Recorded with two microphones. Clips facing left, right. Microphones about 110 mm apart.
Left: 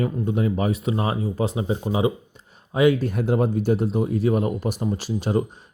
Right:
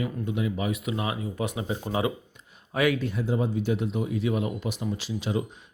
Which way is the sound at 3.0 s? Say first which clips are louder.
Left 6 dB; 55° left (ahead or behind).